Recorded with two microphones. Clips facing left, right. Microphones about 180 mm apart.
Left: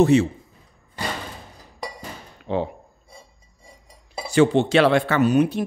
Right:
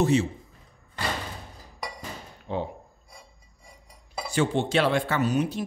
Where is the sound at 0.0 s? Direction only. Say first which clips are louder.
Left 6 dB; 65° left (ahead or behind).